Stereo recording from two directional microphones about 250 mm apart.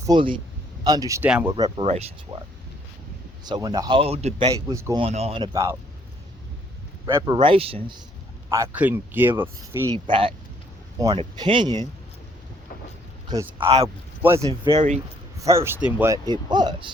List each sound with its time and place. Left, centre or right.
0.0 s speech: centre
3.4 s a man's voice: centre
4.7 s speech: centre
7.0 s a man's voice: centre
8.4 s speech: centre
9.9 s a man's voice: centre
13.3 s speech: centre
14.3 s a man's voice: right
15.4 s speech: centre